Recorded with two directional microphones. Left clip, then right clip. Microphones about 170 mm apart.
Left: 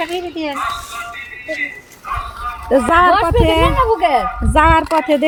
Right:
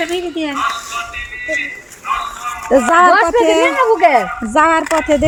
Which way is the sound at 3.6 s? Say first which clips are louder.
Right 3 dB; 50° right (ahead or behind).